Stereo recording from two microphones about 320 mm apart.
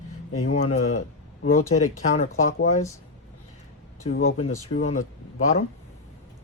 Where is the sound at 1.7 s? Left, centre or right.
Centre.